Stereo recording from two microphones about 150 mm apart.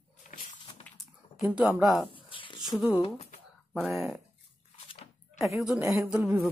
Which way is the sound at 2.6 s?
Centre (ahead or behind).